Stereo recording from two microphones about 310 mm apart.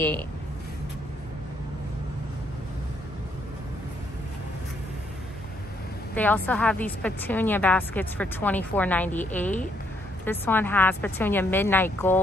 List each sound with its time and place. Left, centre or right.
6.1 s a woman's voice: centre